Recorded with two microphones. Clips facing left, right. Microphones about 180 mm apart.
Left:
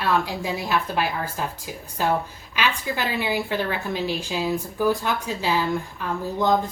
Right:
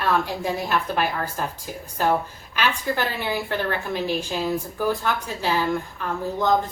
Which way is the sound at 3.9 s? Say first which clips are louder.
Right 1 dB; 50° right (ahead or behind).